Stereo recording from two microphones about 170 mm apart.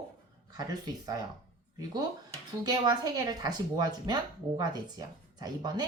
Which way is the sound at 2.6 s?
25° right (ahead or behind).